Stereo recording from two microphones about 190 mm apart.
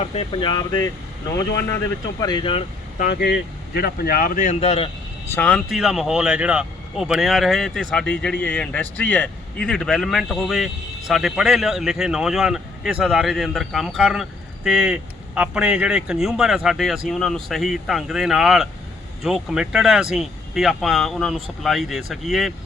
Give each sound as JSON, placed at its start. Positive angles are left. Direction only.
{"t": 0.0, "sound": "speech", "side_deg": 30}
{"t": 2.2, "sound": "speech", "side_deg": 25}
{"t": 3.0, "sound": "speech", "side_deg": 60}
{"t": 5.3, "sound": "speech", "side_deg": 5}